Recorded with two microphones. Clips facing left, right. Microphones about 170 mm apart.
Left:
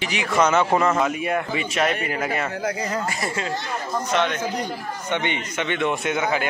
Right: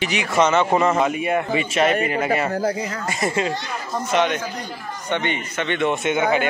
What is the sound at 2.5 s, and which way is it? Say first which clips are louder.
Speech: right 5 dB; 35° right (ahead or behind).